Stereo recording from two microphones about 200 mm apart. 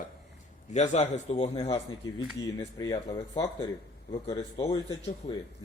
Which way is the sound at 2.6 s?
15° left (ahead or behind).